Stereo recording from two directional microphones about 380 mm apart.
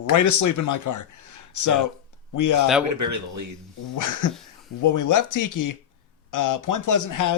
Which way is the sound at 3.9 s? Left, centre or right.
Left.